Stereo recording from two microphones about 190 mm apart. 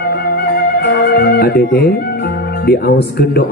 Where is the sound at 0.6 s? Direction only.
60° left (ahead or behind).